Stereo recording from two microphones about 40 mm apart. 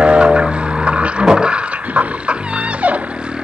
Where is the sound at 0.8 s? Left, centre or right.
Right.